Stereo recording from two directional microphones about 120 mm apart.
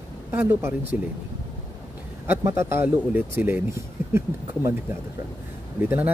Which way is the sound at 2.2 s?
20° right (ahead or behind).